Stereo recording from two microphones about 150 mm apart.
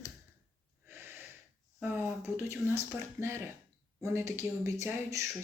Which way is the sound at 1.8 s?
15° right (ahead or behind).